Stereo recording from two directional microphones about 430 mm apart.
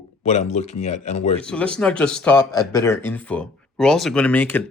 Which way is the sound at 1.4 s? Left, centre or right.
Centre.